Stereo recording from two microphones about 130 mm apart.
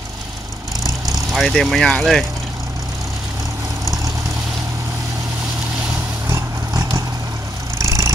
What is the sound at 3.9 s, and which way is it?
Vehicle, 25° right (ahead or behind).